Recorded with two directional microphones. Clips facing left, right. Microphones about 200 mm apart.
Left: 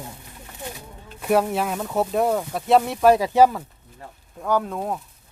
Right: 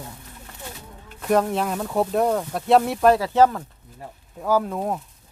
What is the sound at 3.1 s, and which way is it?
Speech, 15° left (ahead or behind).